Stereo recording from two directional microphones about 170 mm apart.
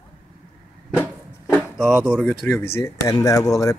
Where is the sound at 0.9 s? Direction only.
10° left (ahead or behind).